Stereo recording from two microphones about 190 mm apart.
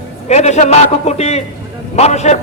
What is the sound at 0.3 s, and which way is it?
A man's voice, 35° left (ahead or behind).